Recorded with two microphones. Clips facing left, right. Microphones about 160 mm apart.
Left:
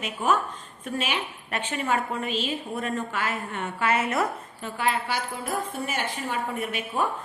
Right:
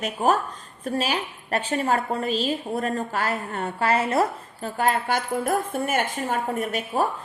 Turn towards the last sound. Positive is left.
turn(degrees=-40)  # may be behind; listen again after turning